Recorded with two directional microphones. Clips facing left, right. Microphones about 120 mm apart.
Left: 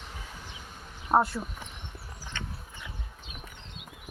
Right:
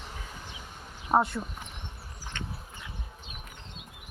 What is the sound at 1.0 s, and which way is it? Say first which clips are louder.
Speech: left 1 dB; centre (ahead or behind).